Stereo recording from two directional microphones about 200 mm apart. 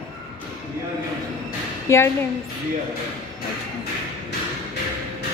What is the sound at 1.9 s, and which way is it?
Speech, 15° left (ahead or behind).